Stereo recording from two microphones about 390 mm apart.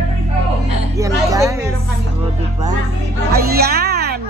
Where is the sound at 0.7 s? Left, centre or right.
Centre.